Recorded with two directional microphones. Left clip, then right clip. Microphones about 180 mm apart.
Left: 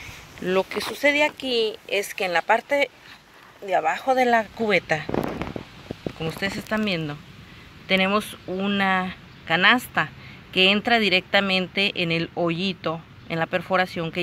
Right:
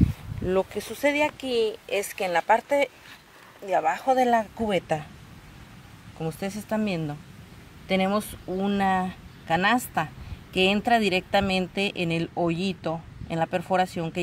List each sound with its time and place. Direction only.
0.5 s speech: centre (ahead or behind)
6.1 s speech: 10° right (ahead or behind)